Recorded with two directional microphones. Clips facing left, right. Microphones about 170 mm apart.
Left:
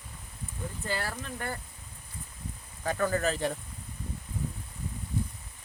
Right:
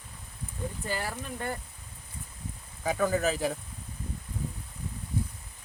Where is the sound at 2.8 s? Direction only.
10° right (ahead or behind).